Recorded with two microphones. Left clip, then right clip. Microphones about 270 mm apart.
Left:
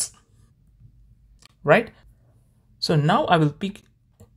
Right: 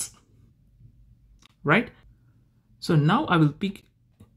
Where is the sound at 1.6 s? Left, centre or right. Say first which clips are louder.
Left 5 dB; left.